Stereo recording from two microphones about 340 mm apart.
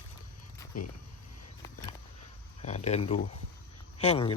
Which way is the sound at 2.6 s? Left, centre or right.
Centre.